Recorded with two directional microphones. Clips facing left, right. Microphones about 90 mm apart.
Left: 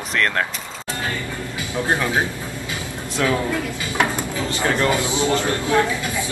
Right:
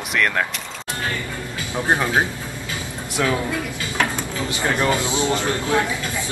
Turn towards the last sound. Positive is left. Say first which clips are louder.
# left 2 dB
turn(degrees=20)  # may be behind; listen again after turning